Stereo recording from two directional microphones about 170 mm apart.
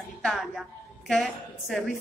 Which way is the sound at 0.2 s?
Centre (ahead or behind).